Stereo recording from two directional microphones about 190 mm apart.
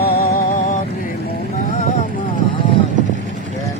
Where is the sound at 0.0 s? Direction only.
50° left (ahead or behind).